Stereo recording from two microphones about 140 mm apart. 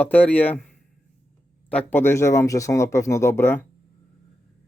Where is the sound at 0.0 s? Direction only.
10° left (ahead or behind).